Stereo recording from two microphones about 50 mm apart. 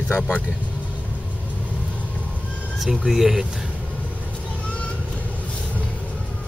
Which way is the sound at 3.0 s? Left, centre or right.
Centre.